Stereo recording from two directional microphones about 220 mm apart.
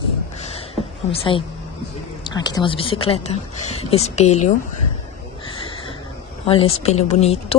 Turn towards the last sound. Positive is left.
turn(degrees=30)  # may be behind; listen again after turning